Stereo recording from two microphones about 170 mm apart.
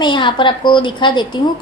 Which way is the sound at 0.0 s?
25° left (ahead or behind).